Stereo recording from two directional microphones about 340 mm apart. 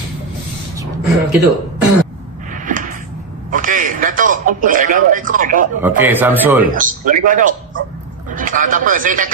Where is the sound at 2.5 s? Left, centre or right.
Right.